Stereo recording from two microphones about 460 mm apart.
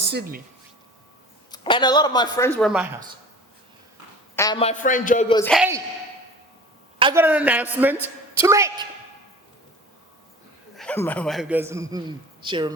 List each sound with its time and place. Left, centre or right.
0.0 s speech: right
1.5 s a woman's voice: centre
4.4 s a woman's voice: centre
7.0 s a man's voice: centre
10.8 s a man's voice: centre